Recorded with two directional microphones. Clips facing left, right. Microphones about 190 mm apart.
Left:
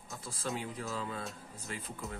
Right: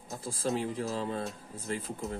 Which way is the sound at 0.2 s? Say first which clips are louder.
Right 7 dB; 30° right (ahead or behind).